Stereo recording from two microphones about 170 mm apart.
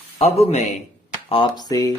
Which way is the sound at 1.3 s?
25° left (ahead or behind).